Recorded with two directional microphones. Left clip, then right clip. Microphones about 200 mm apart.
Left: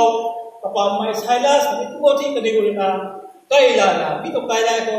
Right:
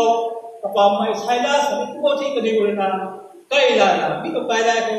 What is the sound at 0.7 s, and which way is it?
A man's voice, 45° left (ahead or behind).